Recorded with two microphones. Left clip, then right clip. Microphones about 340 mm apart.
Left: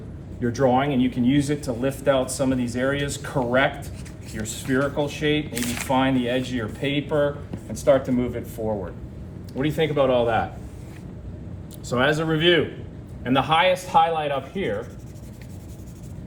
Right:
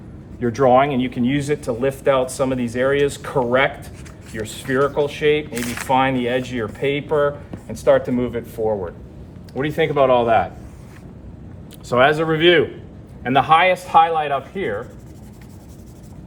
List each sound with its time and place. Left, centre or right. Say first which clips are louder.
0.4 s speech: right 6 dB; centre
4.4 s speech: right 5 dB; right
5.5 s speech: right 2 dB; centre
5.9 s speech: right 5 dB; centre
11.9 s speech: right 6 dB; centre